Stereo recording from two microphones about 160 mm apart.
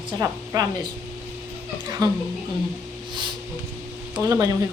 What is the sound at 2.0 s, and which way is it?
Speech, 25° right (ahead or behind).